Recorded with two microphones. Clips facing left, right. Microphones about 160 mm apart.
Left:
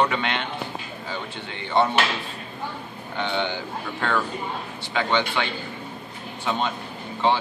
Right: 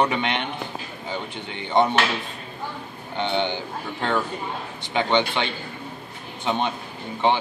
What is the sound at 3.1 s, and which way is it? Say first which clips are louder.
Speech: right 2 dB; 20° right (ahead or behind).